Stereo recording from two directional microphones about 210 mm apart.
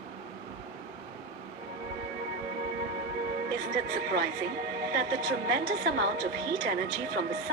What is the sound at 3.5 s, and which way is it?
Speech, 45° right (ahead or behind).